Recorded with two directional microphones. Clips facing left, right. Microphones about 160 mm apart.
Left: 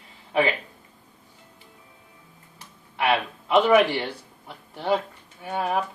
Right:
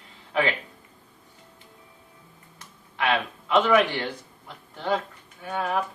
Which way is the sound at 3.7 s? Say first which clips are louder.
Left 2 dB; 10° left (ahead or behind).